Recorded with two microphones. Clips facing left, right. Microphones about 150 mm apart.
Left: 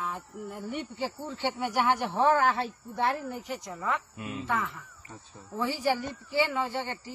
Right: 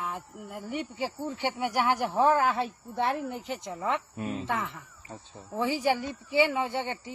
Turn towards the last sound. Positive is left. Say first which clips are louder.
# right 2 dB
turn(degrees=-20)  # may be behind; listen again after turning